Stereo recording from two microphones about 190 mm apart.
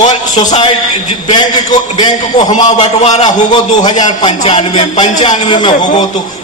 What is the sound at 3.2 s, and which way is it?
Speech, 20° left (ahead or behind).